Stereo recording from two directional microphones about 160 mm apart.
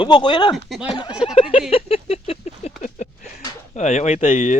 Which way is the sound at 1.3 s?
35° left (ahead or behind).